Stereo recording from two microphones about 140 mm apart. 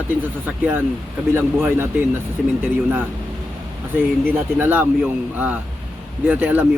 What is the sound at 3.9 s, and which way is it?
Speech, 15° right (ahead or behind).